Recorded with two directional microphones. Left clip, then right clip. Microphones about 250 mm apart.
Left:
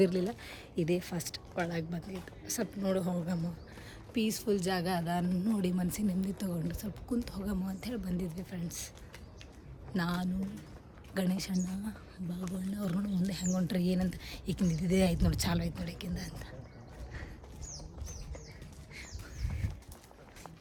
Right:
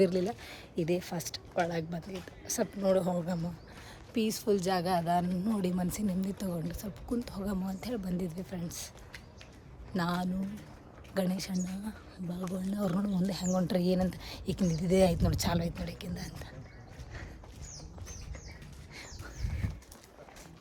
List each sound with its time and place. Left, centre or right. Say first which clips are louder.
0.0 s a woman's voice: right 1 dB; centre
9.9 s a woman's voice: right 2 dB; centre
19.6 s a sound: right 3 dB; centre